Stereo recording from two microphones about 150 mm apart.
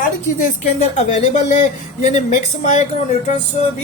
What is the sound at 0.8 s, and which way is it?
Speech, 50° left (ahead or behind).